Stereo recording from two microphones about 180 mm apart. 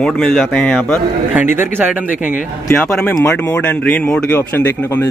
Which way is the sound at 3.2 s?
10° left (ahead or behind).